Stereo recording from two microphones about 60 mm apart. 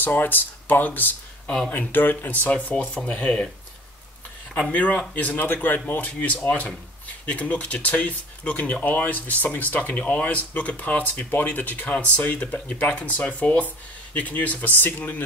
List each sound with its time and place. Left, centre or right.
0.0 s speech: left; by 3.4 s centre
4.6 s speech: left